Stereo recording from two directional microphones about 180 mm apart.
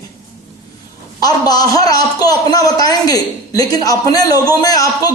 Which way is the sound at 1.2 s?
20° left (ahead or behind).